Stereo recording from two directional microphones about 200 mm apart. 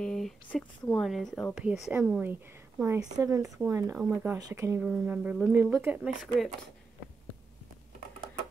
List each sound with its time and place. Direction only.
0.0 s speech: 5° left (ahead or behind)